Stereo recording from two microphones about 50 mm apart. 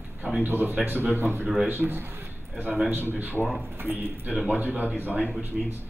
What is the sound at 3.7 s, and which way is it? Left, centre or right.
Speech, right.